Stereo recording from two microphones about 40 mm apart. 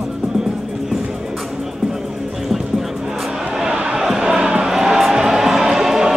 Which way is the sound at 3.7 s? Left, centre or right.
Right.